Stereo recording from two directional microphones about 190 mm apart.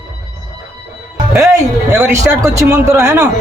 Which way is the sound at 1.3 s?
15° right (ahead or behind).